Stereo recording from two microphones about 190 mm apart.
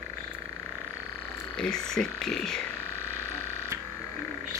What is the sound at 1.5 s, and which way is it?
Speech, 5° left (ahead or behind).